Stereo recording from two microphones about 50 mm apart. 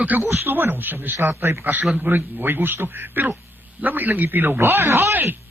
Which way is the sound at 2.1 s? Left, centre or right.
Right.